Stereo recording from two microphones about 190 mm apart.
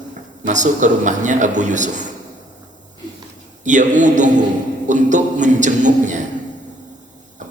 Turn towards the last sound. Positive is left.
turn(degrees=-40)  # may be behind; listen again after turning